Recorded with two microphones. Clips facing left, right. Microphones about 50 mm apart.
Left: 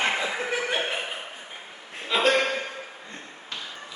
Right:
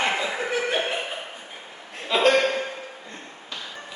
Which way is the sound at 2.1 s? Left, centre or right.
Centre.